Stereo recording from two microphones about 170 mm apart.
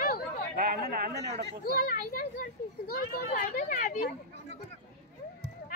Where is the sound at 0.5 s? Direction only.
60° right (ahead or behind).